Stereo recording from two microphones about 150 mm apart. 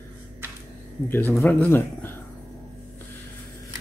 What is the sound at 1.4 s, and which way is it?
Speech, 15° left (ahead or behind).